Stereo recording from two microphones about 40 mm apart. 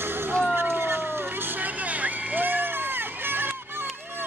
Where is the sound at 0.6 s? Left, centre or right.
Right.